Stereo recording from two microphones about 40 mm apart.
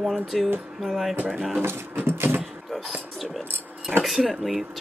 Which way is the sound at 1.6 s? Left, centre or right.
Right.